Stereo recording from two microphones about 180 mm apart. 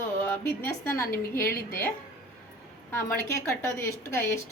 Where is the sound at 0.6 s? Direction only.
15° left (ahead or behind).